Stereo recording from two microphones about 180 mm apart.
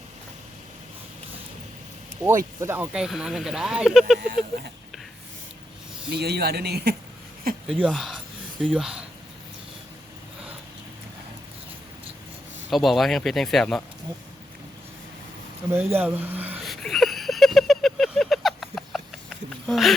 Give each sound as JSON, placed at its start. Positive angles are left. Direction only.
{"t": 2.2, "sound": "speech", "side_deg": -15}
{"t": 6.1, "sound": "speech", "side_deg": -65}
{"t": 7.9, "sound": "speech", "side_deg": 0}
{"t": 12.7, "sound": "speech", "side_deg": 0}
{"t": 15.9, "sound": "speech", "side_deg": -10}
{"t": 16.6, "sound": "a sound", "side_deg": 0}
{"t": 19.6, "sound": "speech", "side_deg": 0}